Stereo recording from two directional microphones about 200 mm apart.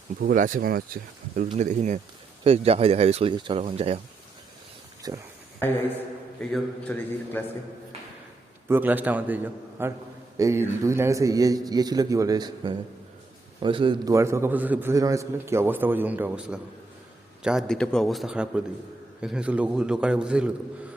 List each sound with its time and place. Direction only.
0.2 s speech: 45° right (ahead or behind)
5.0 s speech: 20° right (ahead or behind)
5.6 s a man's voice: 10° left (ahead or behind)
8.6 s a man's voice: 10° right (ahead or behind)